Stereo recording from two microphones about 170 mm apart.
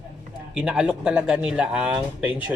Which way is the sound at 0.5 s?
5° right (ahead or behind).